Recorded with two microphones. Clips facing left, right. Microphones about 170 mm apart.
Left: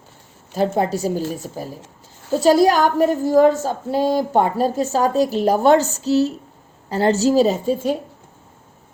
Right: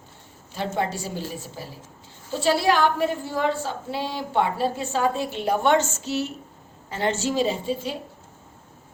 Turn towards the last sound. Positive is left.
turn(degrees=45)  # may be behind; listen again after turning